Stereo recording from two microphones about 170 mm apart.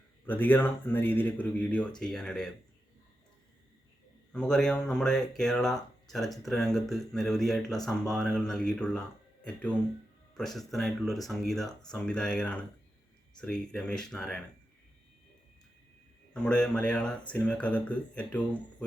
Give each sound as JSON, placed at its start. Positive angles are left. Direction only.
{"t": 0.3, "sound": "speech", "side_deg": 10}
{"t": 4.3, "sound": "speech", "side_deg": 5}
{"t": 16.3, "sound": "speech", "side_deg": 5}